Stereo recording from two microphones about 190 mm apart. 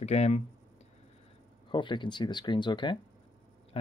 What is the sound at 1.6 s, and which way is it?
Speech, 25° left (ahead or behind).